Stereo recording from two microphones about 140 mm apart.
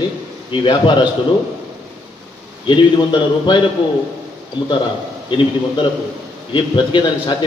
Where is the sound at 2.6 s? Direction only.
35° left (ahead or behind).